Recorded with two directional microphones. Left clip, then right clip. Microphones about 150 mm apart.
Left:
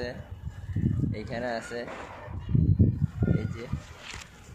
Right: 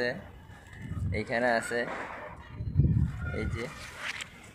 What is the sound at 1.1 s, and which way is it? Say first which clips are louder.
Speech: right 9 dB; 25° right (ahead or behind).